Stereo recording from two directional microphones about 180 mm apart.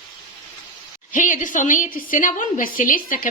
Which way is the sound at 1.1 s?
45° left (ahead or behind).